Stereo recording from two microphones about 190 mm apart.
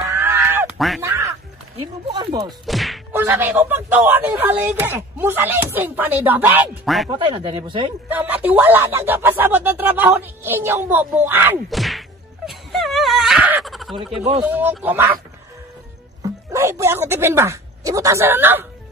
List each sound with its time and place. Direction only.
0.1 s a sound: 10° right (ahead or behind)
0.7 s speech: centre (ahead or behind)
1.0 s quack: 15° right (ahead or behind)
2.1 s speech: 20° right (ahead or behind)
2.6 s whack: centre (ahead or behind)
3.1 s speech: 10° right (ahead or behind)
7.1 s speech: 25° right (ahead or behind)
8.1 s speech: 10° right (ahead or behind)
11.7 s whack: centre (ahead or behind)
12.4 s a sound: centre (ahead or behind)
14.4 s speech: 10° right (ahead or behind)
16.2 s speech: 15° right (ahead or behind)